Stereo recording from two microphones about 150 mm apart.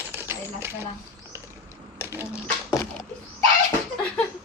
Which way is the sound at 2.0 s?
15° right (ahead or behind).